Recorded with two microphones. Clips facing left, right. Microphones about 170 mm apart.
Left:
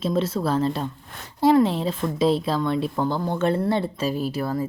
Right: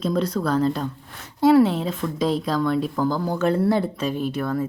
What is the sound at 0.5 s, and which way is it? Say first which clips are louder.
Speech: right 3 dB; 5° left (ahead or behind).